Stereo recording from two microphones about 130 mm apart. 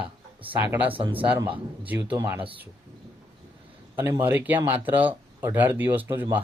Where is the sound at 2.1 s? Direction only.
20° right (ahead or behind).